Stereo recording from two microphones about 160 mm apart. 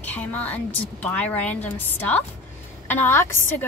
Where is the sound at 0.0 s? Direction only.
10° left (ahead or behind).